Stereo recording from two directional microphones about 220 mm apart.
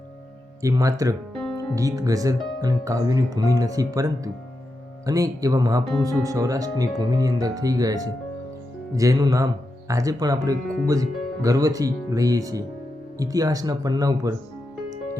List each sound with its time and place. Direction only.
0.6 s speech: 15° right (ahead or behind)